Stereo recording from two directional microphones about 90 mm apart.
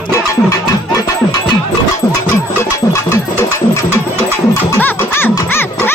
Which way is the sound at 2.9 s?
35° left (ahead or behind).